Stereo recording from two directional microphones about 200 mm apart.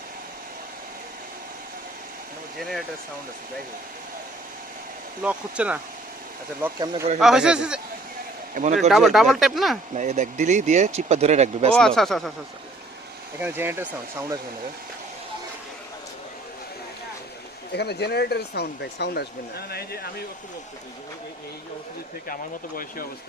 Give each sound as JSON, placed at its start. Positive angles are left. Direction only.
{"t": 2.6, "sound": "speech", "side_deg": 0}
{"t": 5.2, "sound": "speech", "side_deg": -5}
{"t": 8.6, "sound": "speech", "side_deg": -40}
{"t": 8.9, "sound": "speech", "side_deg": 0}
{"t": 9.9, "sound": "speech", "side_deg": -35}
{"t": 11.7, "sound": "speech", "side_deg": 5}
{"t": 13.4, "sound": "speech", "side_deg": -10}
{"t": 17.7, "sound": "speech", "side_deg": 55}